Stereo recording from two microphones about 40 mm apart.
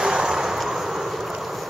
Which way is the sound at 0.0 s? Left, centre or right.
Centre.